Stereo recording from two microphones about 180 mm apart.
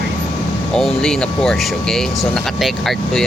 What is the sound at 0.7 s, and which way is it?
Speech, 5° left (ahead or behind).